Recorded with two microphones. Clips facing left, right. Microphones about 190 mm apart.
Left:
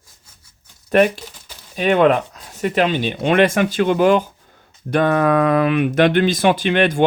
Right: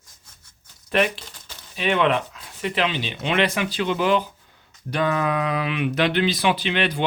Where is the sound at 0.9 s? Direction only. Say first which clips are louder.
Left 7 dB; 45° left (ahead or behind).